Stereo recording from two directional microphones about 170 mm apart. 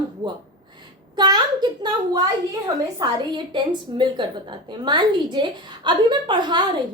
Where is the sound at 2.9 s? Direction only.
25° right (ahead or behind).